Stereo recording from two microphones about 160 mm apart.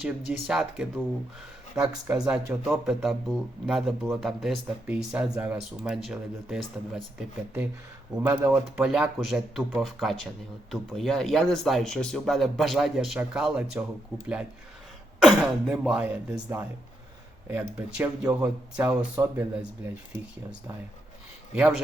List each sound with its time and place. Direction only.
0.0 s speech: 5° right (ahead or behind)
1.7 s speech: 15° right (ahead or behind)
2.1 s speech: 5° right (ahead or behind)
21.5 s a man's voice: centre (ahead or behind)